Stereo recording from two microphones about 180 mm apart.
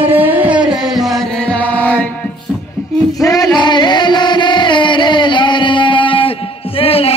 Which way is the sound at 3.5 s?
25° left (ahead or behind).